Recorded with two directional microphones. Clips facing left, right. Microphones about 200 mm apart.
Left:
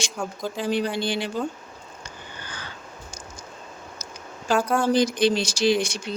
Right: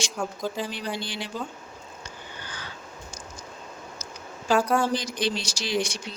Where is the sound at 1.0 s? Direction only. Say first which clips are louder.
Left 9 dB; 55° left (ahead or behind).